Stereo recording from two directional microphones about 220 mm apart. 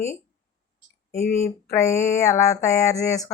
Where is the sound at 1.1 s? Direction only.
30° left (ahead or behind).